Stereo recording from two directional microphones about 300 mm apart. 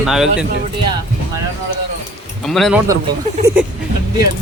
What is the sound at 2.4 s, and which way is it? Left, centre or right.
Speech, centre.